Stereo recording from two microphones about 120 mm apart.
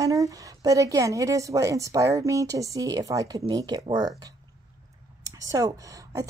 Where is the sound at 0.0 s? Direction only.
30° right (ahead or behind).